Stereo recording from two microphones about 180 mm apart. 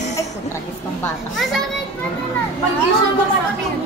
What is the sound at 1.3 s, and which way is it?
Speech, centre (ahead or behind).